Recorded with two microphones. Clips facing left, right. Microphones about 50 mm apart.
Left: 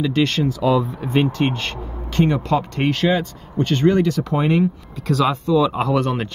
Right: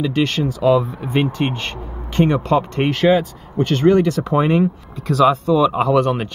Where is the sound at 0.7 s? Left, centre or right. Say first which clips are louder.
Right 5 dB; centre.